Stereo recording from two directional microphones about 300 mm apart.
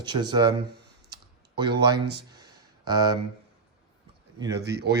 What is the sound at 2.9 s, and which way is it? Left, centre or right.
Speech, centre.